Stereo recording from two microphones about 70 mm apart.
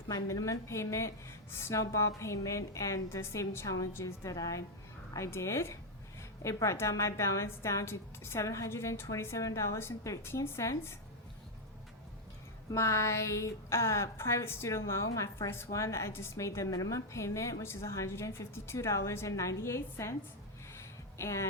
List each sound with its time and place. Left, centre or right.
0.1 s a woman's voice: left
12.7 s a woman's voice: left
15.4 s a woman's voice: left
20.7 s a sound: left